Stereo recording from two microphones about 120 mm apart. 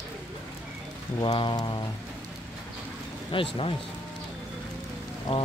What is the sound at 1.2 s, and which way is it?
Rain, 45° left (ahead or behind).